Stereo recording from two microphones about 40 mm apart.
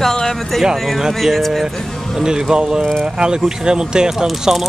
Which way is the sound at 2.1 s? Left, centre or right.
Centre.